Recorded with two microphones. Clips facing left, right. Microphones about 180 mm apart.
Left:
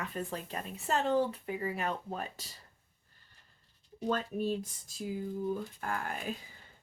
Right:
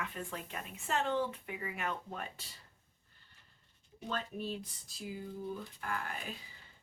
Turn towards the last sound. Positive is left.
turn(degrees=45)  # may be behind; listen again after turning